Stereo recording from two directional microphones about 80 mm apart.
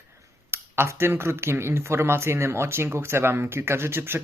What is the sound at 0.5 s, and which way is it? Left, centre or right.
Speech, right.